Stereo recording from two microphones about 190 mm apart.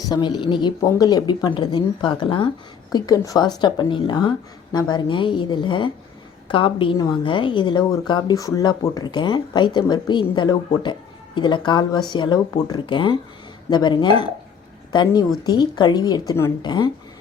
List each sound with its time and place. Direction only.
0.1 s a woman's voice: 25° left (ahead or behind)